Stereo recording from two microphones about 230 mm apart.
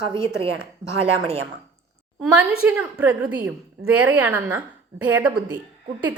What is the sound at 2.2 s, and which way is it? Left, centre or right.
A woman's voice, centre.